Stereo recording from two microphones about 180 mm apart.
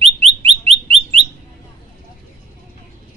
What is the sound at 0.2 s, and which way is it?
Bird, 35° right (ahead or behind).